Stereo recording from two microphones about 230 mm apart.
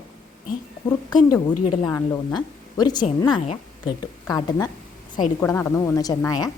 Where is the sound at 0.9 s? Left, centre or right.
Centre.